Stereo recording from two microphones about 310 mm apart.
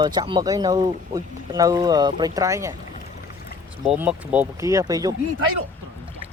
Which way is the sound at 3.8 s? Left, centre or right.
Centre.